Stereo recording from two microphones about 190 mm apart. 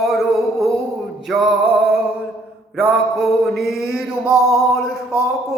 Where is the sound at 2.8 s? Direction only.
Centre (ahead or behind).